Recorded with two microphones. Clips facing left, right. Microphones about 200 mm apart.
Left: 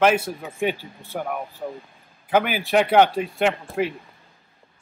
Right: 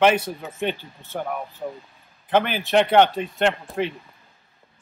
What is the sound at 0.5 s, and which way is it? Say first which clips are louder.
Speech: left 3 dB; 10° left (ahead or behind).